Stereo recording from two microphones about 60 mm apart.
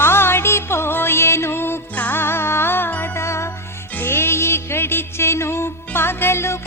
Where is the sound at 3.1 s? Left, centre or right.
Left.